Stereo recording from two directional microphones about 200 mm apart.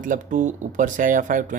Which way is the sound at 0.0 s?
40° right (ahead or behind).